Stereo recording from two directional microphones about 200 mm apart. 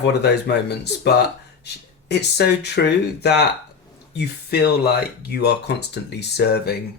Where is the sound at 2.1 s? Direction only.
55° left (ahead or behind).